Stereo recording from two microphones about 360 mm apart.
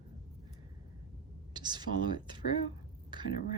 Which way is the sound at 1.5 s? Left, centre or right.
Centre.